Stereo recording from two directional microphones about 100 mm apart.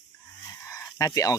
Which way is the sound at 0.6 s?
35° left (ahead or behind).